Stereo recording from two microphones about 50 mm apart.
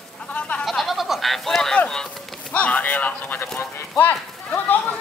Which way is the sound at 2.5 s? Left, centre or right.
Left.